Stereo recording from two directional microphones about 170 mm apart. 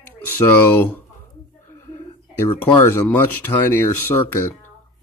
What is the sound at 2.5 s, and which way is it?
Speech, 30° left (ahead or behind).